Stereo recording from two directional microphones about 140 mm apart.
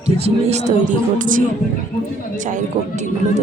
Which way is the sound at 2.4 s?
60° right (ahead or behind).